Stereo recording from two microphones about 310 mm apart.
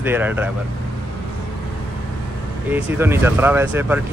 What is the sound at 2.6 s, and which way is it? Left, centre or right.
Speech, centre.